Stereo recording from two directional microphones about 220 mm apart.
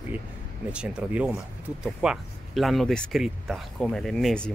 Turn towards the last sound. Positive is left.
turn(degrees=5)  # may be behind; listen again after turning